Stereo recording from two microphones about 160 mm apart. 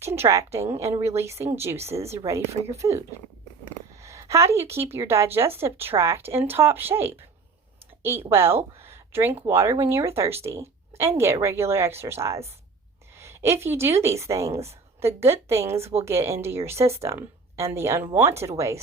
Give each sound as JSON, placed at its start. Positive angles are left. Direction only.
{"t": 0.0, "sound": "speech", "side_deg": -15}
{"t": 1.7, "sound": "speech", "side_deg": -40}
{"t": 2.0, "sound": "speech", "side_deg": -15}
{"t": 4.0, "sound": "speech", "side_deg": -20}
{"t": 8.3, "sound": "a woman's voice", "side_deg": -15}